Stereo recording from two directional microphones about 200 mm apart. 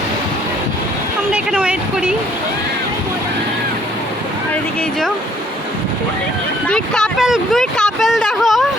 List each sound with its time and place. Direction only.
1.3 s speech: 5° right (ahead or behind)
6.7 s speech: 5° left (ahead or behind)